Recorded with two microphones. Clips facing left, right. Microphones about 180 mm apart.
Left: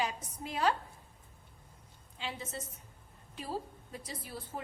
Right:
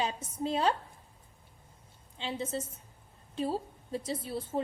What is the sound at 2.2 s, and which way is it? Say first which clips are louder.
A woman's voice: right 6 dB; 25° right (ahead or behind).